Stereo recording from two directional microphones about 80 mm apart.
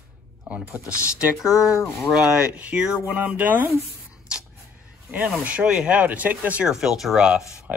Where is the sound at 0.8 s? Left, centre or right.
Left.